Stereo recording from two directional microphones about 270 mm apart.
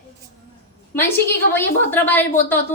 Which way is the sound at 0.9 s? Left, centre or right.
Centre.